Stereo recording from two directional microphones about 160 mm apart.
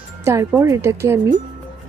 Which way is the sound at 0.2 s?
15° right (ahead or behind).